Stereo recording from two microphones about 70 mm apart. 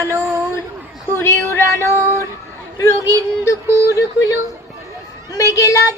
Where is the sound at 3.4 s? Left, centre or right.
Left.